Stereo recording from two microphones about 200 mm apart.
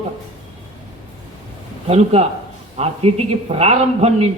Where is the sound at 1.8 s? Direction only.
30° right (ahead or behind).